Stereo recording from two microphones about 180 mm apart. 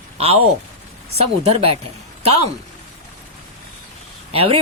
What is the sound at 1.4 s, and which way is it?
Speech, 35° right (ahead or behind).